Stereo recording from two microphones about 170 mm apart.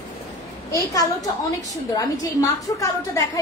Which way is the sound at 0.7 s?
20° left (ahead or behind).